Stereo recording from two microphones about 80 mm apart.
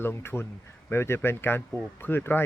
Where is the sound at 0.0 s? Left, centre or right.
Left.